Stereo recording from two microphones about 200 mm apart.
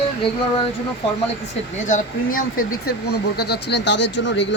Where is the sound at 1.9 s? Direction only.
40° left (ahead or behind).